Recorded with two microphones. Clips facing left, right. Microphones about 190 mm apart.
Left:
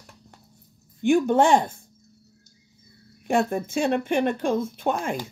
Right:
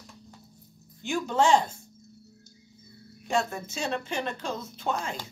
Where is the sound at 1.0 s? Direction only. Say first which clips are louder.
Left 6 dB; 55° left (ahead or behind).